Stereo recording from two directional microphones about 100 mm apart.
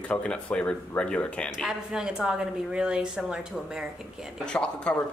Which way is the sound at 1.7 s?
5° right (ahead or behind).